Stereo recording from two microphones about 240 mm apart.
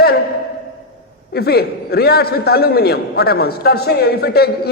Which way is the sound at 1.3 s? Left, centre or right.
Left.